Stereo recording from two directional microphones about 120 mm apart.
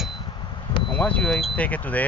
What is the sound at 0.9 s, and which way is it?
Speech, 10° left (ahead or behind).